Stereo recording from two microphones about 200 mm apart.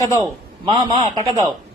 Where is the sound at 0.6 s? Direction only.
30° right (ahead or behind).